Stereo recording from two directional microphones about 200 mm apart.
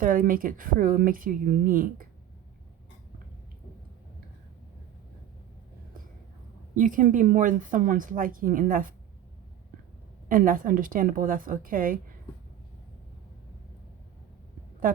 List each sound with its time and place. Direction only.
0.0 s speech: 45° right (ahead or behind)
6.7 s speech: 40° right (ahead or behind)
10.2 s speech: 45° right (ahead or behind)
14.8 s speech: 45° right (ahead or behind)